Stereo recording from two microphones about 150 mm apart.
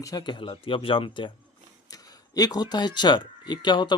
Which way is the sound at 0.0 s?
25° left (ahead or behind).